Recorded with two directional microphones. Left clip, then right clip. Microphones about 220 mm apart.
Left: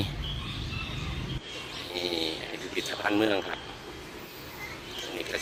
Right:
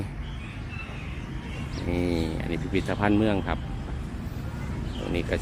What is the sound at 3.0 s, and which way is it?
Speech, centre (ahead or behind).